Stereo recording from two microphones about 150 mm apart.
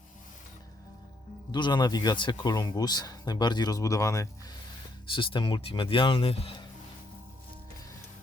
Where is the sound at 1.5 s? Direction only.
30° left (ahead or behind).